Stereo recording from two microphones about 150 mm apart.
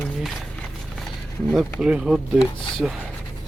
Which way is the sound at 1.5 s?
5° right (ahead or behind).